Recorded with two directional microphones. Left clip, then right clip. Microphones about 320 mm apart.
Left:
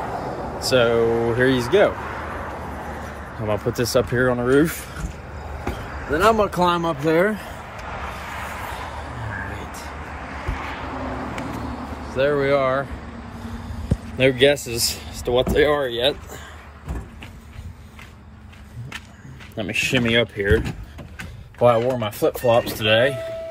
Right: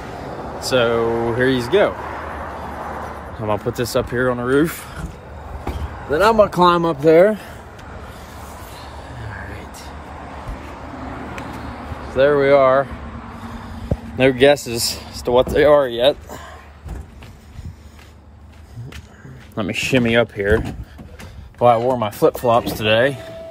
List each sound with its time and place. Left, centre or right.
0.6 s speech: centre
3.4 s speech: centre
9.5 s whispering: centre
12.1 s speech: centre
14.1 s speech: centre
19.5 s speech: centre
21.5 s speech: centre